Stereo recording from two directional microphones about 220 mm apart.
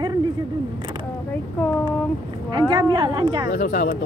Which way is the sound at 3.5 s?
40° left (ahead or behind).